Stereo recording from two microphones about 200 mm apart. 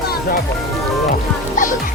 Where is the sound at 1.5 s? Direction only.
40° left (ahead or behind).